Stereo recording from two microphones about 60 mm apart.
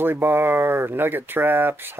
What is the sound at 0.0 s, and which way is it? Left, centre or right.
Speech, right.